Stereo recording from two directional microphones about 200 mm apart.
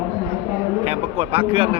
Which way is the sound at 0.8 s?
30° right (ahead or behind).